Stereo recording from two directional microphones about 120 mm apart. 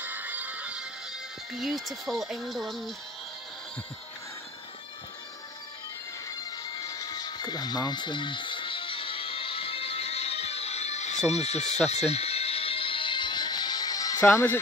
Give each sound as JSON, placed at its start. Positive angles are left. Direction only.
{"t": 0.0, "sound": "music", "side_deg": -15}
{"t": 1.5, "sound": "speech", "side_deg": 0}
{"t": 6.3, "sound": "music", "side_deg": 35}
{"t": 11.2, "sound": "speech", "side_deg": 65}
{"t": 11.9, "sound": "music", "side_deg": 60}
{"t": 14.2, "sound": "speech", "side_deg": 20}